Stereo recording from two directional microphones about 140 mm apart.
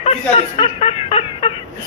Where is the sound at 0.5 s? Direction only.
40° left (ahead or behind).